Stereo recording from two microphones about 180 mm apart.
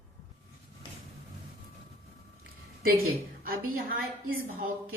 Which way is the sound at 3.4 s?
55° right (ahead or behind).